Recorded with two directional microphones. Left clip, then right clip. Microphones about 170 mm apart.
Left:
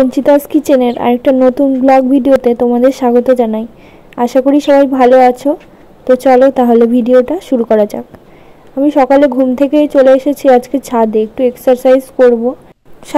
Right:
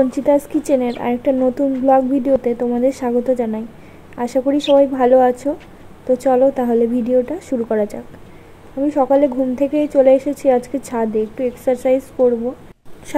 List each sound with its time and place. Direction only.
0.1 s a woman's voice: 30° left (ahead or behind)